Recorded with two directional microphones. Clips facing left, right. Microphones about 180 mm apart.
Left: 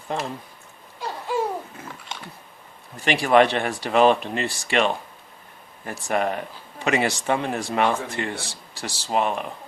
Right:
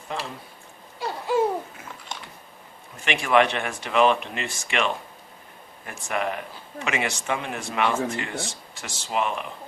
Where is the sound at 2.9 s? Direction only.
35° left (ahead or behind).